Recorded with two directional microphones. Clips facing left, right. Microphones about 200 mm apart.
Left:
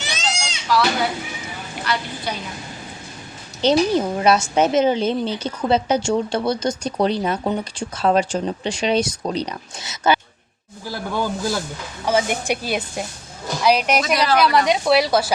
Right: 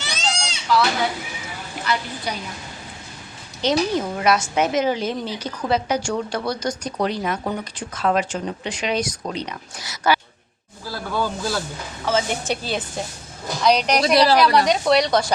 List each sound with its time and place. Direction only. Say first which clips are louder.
0.1 s goat: even; 10° left (ahead or behind)
1.8 s a woman's voice: even; 5° right (ahead or behind)
3.6 s a woman's voice: left 4 dB; 30° left (ahead or behind)
9.8 s a woman's voice: left 2 dB; 20° left (ahead or behind); by 14.0 s 5° left (ahead or behind)
14.0 s a woman's voice: right 4 dB; 35° right (ahead or behind)
14.3 s a woman's voice: even; centre (ahead or behind)